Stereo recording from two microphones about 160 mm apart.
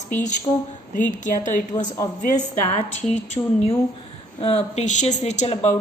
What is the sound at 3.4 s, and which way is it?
Speech, 20° left (ahead or behind).